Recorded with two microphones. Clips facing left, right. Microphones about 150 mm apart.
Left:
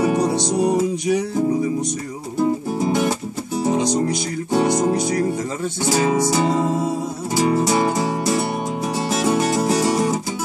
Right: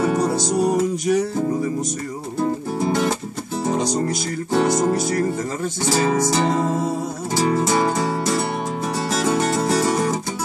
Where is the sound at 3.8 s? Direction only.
Centre (ahead or behind).